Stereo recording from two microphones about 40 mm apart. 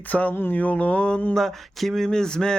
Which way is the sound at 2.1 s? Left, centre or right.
Centre.